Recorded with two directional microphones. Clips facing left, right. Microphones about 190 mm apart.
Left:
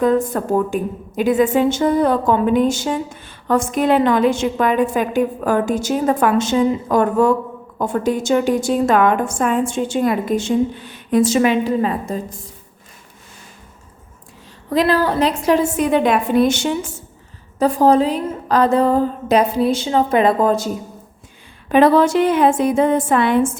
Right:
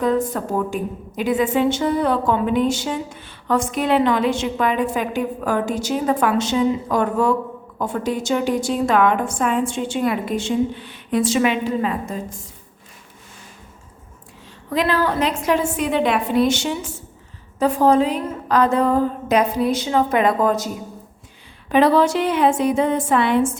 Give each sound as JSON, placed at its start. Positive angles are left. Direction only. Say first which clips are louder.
{"t": 0.0, "sound": "a woman's voice", "louder": "left 3 dB", "side_deg": 50}
{"t": 14.7, "sound": "a woman's voice", "louder": "left 4 dB", "side_deg": 35}
{"t": 17.6, "sound": "a woman's voice", "louder": "left 2 dB", "side_deg": 35}
{"t": 21.7, "sound": "a woman's voice", "louder": "left 3 dB", "side_deg": 50}